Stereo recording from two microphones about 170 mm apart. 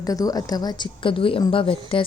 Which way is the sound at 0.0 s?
20° left (ahead or behind).